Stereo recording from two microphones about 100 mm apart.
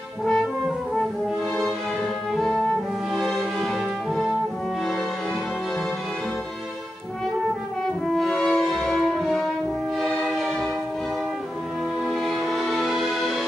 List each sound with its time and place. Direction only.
0.2 s brass instrument: 5° left (ahead or behind)
2.3 s music: centre (ahead or behind)
8.1 s french horn: 5° left (ahead or behind)
9.9 s music: 5° left (ahead or behind)
12.0 s music: centre (ahead or behind)